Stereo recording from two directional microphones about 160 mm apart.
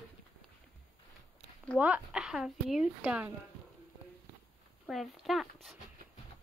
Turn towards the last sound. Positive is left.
turn(degrees=0)  # may be behind; listen again after turning